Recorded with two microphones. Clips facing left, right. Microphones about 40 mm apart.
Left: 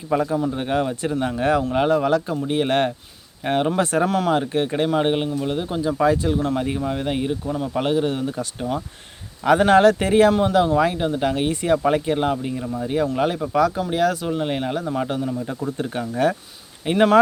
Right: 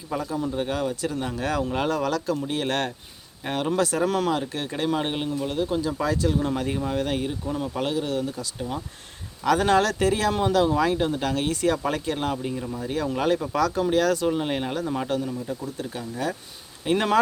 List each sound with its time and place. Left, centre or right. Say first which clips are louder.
0.1 s speech: left 8 dB; left
0.3 s speech: left 5 dB; left
4.0 s speech: left 3 dB; centre
4.3 s speech: left 6 dB; left
6.6 s speech: left 2 dB; centre
7.8 s speech: left 6 dB; left
10.4 s speech: left 3 dB; centre
15.4 s speech: left 5 dB; left
16.8 s speech: left 6 dB; centre